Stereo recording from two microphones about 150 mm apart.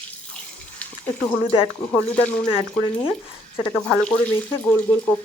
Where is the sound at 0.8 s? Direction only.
5° left (ahead or behind).